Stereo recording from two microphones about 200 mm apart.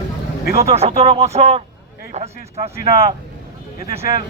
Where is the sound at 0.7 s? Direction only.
30° right (ahead or behind).